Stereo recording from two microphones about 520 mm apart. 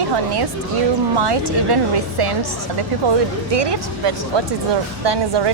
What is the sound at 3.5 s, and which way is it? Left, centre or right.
A woman's voice, right.